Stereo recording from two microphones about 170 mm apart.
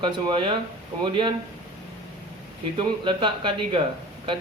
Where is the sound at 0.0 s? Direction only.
30° right (ahead or behind).